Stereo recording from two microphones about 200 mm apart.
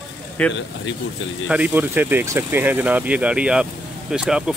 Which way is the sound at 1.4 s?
5° right (ahead or behind).